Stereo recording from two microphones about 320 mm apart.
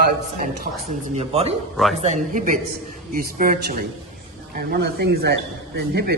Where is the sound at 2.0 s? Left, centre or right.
Right.